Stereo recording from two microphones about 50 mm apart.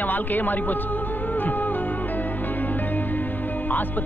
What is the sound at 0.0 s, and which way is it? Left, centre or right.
Speech, left.